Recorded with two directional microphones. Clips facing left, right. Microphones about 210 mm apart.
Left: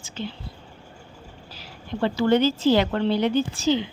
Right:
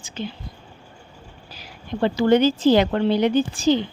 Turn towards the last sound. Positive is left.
turn(degrees=-15)  # may be behind; listen again after turning